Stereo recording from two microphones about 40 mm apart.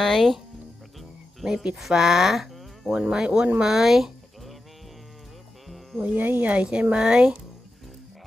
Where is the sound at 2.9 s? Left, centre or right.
Centre.